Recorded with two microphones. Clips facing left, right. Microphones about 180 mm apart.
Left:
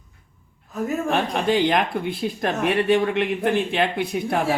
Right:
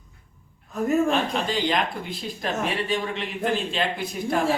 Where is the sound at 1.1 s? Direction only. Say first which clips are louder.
Left 4 dB; 60° left (ahead or behind).